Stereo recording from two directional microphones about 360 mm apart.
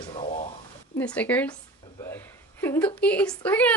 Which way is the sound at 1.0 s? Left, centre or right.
Centre.